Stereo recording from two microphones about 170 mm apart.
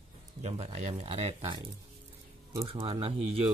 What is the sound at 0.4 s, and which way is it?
Speech, 40° right (ahead or behind).